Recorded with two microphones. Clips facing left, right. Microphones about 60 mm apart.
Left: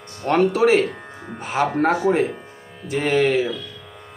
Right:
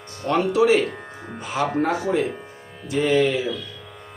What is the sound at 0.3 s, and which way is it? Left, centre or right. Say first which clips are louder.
Speech: left 2 dB; left.